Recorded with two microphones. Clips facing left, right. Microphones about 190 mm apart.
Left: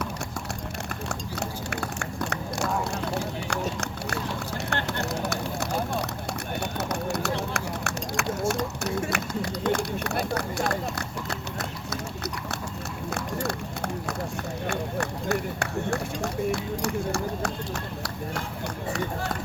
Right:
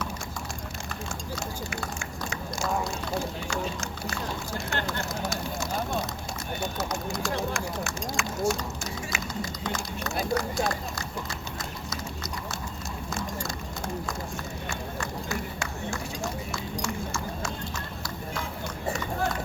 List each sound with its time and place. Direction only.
1.4 s vehicle: 65° left (ahead or behind)
6.6 s a sound: 65° left (ahead or behind)
14.7 s run: 65° left (ahead or behind)